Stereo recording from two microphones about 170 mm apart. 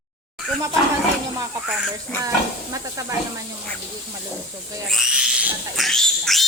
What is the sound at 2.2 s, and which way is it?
Speech, 20° right (ahead or behind).